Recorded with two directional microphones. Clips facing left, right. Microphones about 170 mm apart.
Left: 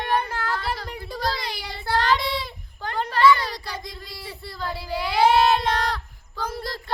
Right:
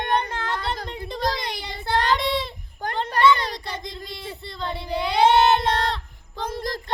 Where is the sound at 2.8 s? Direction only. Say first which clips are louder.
Right 3 dB; 45° right (ahead or behind).